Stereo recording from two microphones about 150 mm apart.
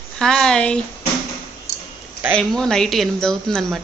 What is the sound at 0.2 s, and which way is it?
Speech, 5° left (ahead or behind).